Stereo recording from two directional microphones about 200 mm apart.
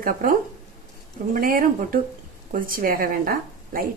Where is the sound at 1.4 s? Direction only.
45° right (ahead or behind).